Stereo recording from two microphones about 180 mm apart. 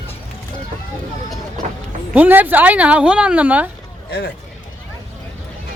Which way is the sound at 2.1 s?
10° right (ahead or behind).